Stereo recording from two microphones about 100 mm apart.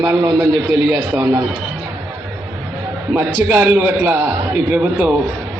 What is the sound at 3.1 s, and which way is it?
A man's voice, 20° right (ahead or behind).